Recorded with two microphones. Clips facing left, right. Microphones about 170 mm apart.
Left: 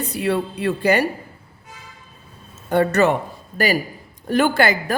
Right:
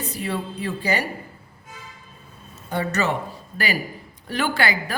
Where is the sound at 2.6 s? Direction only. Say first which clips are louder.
Left 7 dB; 60° left (ahead or behind).